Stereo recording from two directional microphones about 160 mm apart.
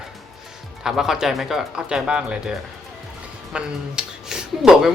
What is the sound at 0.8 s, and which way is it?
Speech, 5° right (ahead or behind).